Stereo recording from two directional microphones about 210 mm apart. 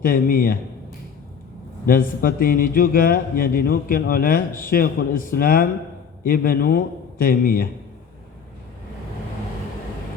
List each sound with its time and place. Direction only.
0.0 s speech: 40° left (ahead or behind)
1.9 s speech: 40° left (ahead or behind)